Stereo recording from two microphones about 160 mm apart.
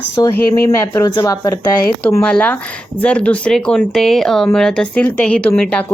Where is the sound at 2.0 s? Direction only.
5° left (ahead or behind).